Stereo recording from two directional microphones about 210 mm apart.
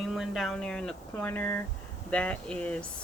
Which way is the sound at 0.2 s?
Centre (ahead or behind).